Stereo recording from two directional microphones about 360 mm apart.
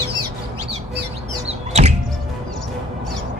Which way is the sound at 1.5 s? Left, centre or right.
Centre.